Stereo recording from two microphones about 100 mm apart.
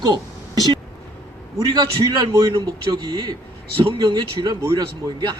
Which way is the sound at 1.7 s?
50° right (ahead or behind).